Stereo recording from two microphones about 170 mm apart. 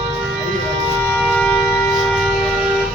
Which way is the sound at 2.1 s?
Centre (ahead or behind).